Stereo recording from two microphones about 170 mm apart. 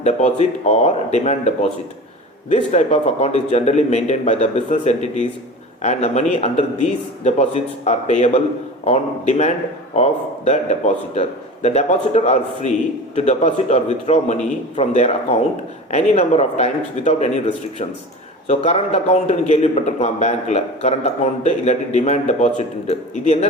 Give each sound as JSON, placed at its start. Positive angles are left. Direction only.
{"t": 0.0, "sound": "a man's voice", "side_deg": 40}
{"t": 2.7, "sound": "a man's voice", "side_deg": 40}